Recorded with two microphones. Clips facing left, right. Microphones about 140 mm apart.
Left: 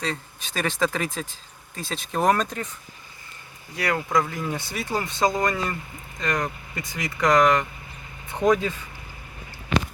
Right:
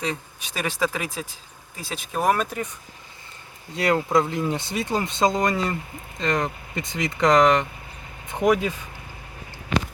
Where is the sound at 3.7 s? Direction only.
25° right (ahead or behind).